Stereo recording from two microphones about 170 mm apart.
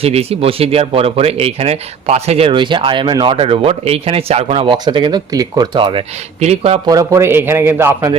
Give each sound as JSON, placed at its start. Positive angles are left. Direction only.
{"t": 0.0, "sound": "speech", "side_deg": -35}
{"t": 6.8, "sound": "a man's voice", "side_deg": -20}